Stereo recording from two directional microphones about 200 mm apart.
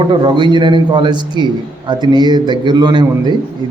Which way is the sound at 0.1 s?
25° right (ahead or behind).